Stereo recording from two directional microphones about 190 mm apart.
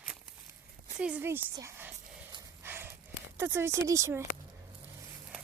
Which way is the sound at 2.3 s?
20° right (ahead or behind).